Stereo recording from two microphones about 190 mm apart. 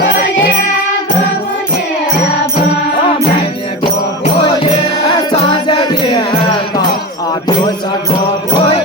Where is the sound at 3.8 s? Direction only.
25° left (ahead or behind).